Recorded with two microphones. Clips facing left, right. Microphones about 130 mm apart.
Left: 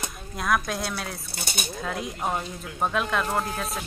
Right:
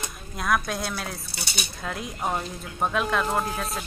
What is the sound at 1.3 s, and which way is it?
Speech, 50° left (ahead or behind).